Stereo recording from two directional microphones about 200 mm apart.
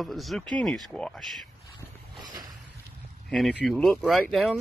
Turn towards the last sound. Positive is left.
turn(degrees=0)  # may be behind; listen again after turning